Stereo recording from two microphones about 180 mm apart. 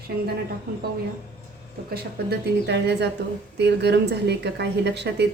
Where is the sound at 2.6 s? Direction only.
70° right (ahead or behind).